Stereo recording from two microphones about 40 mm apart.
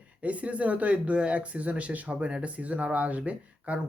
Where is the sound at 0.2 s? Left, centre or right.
Right.